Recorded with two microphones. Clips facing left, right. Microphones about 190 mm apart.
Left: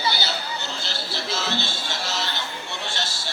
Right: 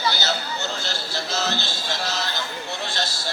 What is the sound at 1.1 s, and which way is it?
Music, 40° right (ahead or behind).